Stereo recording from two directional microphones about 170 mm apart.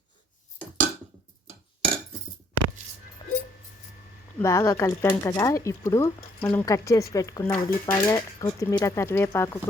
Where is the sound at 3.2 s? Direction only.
25° left (ahead or behind).